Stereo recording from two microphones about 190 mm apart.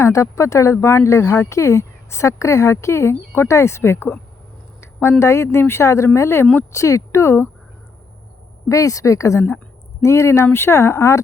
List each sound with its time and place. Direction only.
0.0 s speech: 15° left (ahead or behind)
4.8 s a sound: 15° left (ahead or behind)
5.2 s speech: 15° left (ahead or behind)
8.7 s speech: 15° left (ahead or behind)